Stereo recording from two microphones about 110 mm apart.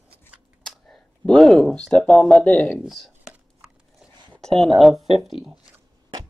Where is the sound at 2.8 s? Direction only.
Centre (ahead or behind).